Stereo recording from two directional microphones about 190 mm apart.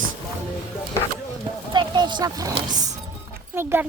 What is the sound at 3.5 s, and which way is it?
Speech, 10° right (ahead or behind).